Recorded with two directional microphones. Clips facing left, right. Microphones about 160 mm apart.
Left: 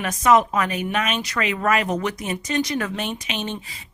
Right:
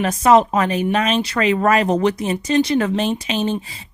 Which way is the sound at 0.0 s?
30° right (ahead or behind).